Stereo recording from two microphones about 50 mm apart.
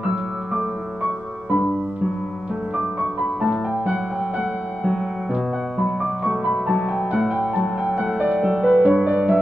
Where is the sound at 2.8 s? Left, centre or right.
Centre.